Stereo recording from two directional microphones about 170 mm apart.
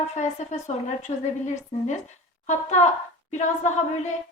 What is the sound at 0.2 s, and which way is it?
Speech, 45° left (ahead or behind).